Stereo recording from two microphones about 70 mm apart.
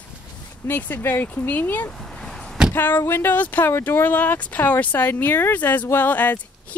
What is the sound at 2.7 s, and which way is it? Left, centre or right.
Speech, left.